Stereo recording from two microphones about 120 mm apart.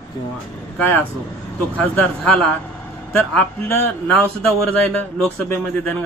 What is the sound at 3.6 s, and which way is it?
A man's voice, 15° left (ahead or behind).